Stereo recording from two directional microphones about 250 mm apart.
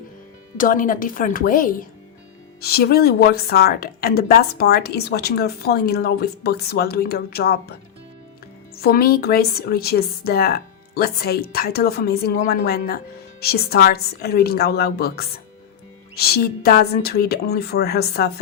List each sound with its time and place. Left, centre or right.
0.5 s a woman's voice: left